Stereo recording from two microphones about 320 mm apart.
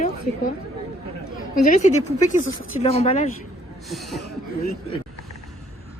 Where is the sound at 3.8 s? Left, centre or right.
Centre.